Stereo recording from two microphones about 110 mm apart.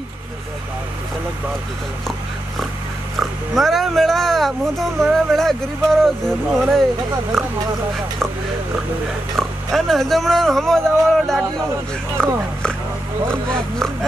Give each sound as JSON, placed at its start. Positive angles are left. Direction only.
{"t": 3.2, "sound": "speech", "side_deg": 0}
{"t": 9.4, "sound": "speech", "side_deg": 0}